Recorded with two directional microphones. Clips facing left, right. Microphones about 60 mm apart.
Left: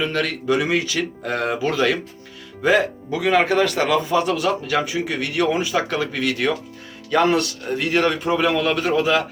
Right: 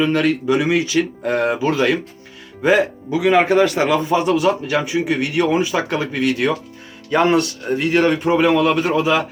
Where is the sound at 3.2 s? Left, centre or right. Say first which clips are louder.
Right 4 dB; centre.